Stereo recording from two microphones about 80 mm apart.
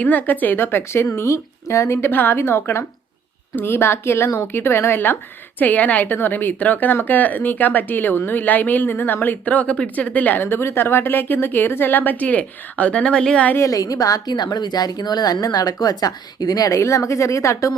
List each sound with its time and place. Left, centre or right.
0.0 s a woman's voice: left
13.6 s a woman's voice: left